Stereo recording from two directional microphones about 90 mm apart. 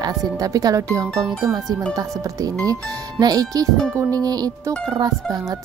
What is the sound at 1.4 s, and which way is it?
Music, 45° right (ahead or behind).